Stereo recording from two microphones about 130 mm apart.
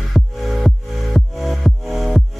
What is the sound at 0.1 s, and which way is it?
Music, centre (ahead or behind).